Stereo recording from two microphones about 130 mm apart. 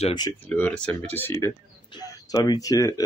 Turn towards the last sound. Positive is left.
turn(degrees=25)  # may be behind; listen again after turning